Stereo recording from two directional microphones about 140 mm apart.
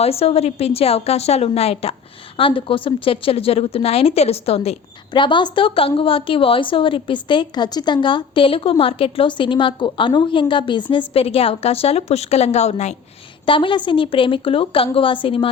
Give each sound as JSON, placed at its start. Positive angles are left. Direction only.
{"t": 0.0, "sound": "a woman's voice", "side_deg": 45}
{"t": 13.4, "sound": "a woman's voice", "side_deg": 35}